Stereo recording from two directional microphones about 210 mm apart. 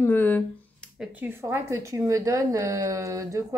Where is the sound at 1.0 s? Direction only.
10° right (ahead or behind).